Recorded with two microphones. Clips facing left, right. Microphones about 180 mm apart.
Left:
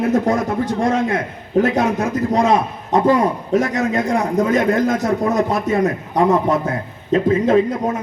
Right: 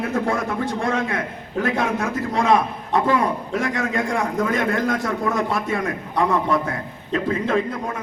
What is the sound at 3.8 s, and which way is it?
Speech, 20° left (ahead or behind).